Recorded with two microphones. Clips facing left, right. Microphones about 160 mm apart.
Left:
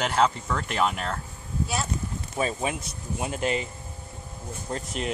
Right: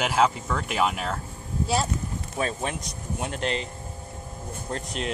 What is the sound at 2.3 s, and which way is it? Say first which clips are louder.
Speech: left 1 dB; 5° left (ahead or behind).